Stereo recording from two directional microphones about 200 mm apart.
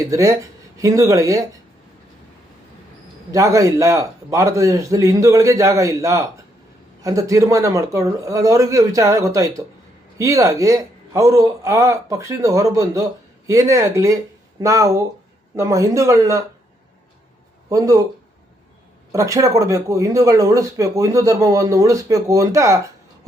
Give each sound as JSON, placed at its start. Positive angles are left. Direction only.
{"t": 0.1, "sound": "speech", "side_deg": -15}
{"t": 3.3, "sound": "speech", "side_deg": -15}
{"t": 17.7, "sound": "speech", "side_deg": -15}
{"t": 19.1, "sound": "speech", "side_deg": -15}